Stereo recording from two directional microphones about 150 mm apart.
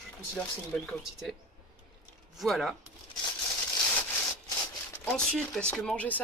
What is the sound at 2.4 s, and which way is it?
Speech, centre (ahead or behind).